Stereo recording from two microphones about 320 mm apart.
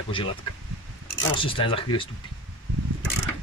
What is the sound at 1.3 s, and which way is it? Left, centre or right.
Speech, centre.